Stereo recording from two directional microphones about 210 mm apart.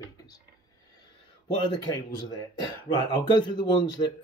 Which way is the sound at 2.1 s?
20° left (ahead or behind).